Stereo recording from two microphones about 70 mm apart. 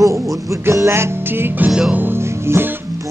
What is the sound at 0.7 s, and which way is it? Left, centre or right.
Music, right.